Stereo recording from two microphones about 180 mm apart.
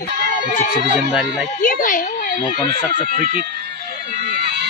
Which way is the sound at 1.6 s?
50° left (ahead or behind).